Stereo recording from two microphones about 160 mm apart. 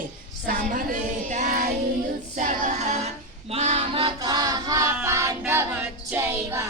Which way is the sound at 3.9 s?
30° right (ahead or behind).